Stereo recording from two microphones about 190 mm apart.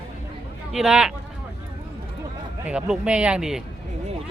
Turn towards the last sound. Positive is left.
turn(degrees=-5)  # may be behind; listen again after turning